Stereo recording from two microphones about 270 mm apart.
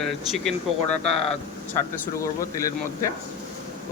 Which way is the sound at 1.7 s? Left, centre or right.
Centre.